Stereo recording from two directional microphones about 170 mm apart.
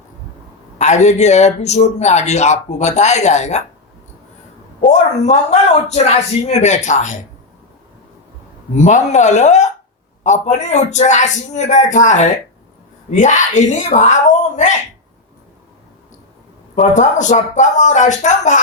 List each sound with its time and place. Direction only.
0.8 s a man's voice: 45° left (ahead or behind)
4.9 s a man's voice: 40° left (ahead or behind)
8.7 s a man's voice: 40° left (ahead or behind)
16.7 s a man's voice: 45° left (ahead or behind)